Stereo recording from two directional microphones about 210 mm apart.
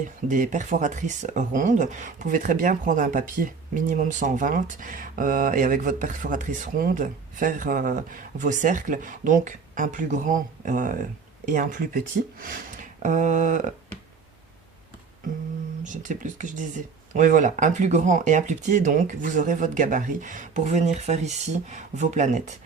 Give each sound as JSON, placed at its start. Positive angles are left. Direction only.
{"t": 0.3, "sound": "speech", "side_deg": -35}
{"t": 12.4, "sound": "speech", "side_deg": -40}
{"t": 15.8, "sound": "speech", "side_deg": -35}